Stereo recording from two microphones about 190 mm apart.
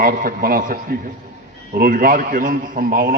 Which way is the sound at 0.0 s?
50° right (ahead or behind).